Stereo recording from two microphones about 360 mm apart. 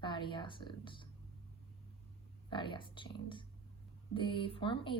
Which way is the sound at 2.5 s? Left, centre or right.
Centre.